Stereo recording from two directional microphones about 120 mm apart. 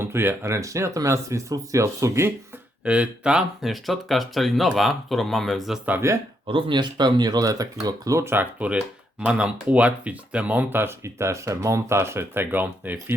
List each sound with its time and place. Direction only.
0.0 s speech: 20° right (ahead or behind)
2.8 s speech: 10° right (ahead or behind)
5.9 s speech: 25° right (ahead or behind)
6.5 s speech: 45° right (ahead or behind); by 13.1 s 15° right (ahead or behind)